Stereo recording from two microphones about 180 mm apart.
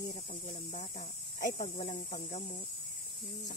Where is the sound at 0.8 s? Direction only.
35° left (ahead or behind).